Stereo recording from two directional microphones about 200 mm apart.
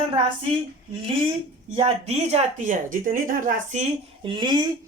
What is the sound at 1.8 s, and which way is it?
Speech, 30° right (ahead or behind).